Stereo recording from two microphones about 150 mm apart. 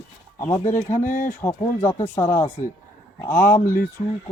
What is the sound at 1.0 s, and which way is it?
Speech, 60° left (ahead or behind).